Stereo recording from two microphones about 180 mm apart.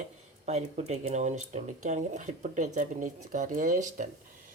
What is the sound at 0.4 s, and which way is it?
Speech, 40° right (ahead or behind).